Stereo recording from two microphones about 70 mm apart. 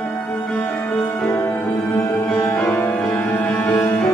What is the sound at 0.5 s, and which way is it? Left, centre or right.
Music, centre.